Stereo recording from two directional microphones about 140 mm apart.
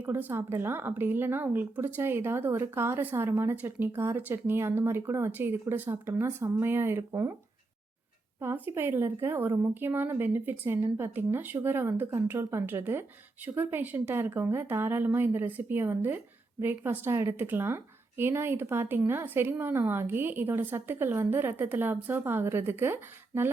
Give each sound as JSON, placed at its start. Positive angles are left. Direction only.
{"t": 0.0, "sound": "speech", "side_deg": -15}
{"t": 8.4, "sound": "speech", "side_deg": -15}